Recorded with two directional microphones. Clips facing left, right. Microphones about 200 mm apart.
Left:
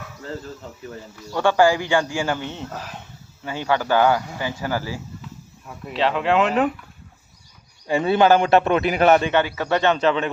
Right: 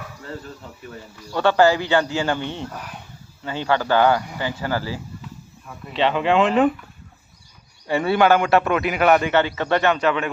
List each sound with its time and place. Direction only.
1.4 s speech: 10° left (ahead or behind)
2.7 s a man's voice: 25° left (ahead or behind)
3.4 s speech: 10° left (ahead or behind)
5.9 s speech: centre (ahead or behind)
7.9 s a man's voice: 20° left (ahead or behind)
9.2 s speech: 15° left (ahead or behind)
9.9 s a man's voice: 30° left (ahead or behind)